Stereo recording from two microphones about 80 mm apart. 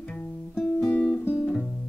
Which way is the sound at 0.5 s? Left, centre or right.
Centre.